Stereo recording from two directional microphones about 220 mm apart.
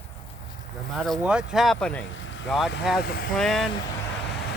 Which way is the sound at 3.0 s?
45° left (ahead or behind).